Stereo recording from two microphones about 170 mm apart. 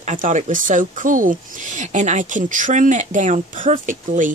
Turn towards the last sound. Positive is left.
turn(degrees=-50)  # may be behind; listen again after turning